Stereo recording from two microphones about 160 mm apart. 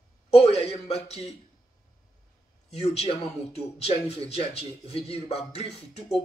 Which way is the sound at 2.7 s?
40° left (ahead or behind).